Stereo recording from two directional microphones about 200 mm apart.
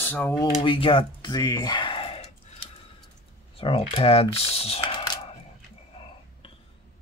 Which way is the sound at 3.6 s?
25° left (ahead or behind).